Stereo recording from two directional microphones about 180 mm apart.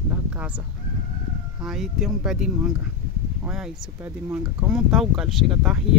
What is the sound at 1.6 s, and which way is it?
Speech, centre (ahead or behind).